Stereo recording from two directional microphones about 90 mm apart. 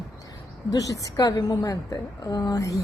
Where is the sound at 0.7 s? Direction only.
40° left (ahead or behind).